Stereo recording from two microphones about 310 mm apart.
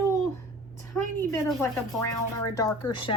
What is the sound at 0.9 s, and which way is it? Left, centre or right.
A woman's voice, centre.